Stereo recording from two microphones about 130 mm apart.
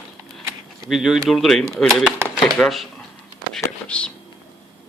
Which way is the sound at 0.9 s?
5° right (ahead or behind).